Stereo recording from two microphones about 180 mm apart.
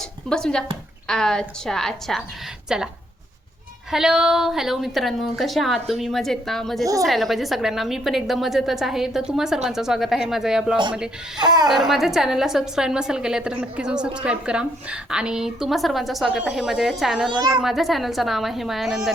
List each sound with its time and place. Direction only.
0.3 s a woman's voice: 5° left (ahead or behind)
3.9 s a woman's voice: 5° right (ahead or behind)
11.3 s speech: 25° right (ahead or behind)
11.7 s a woman's voice: centre (ahead or behind)